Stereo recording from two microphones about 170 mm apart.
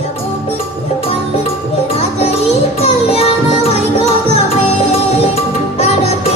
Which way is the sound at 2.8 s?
35° left (ahead or behind).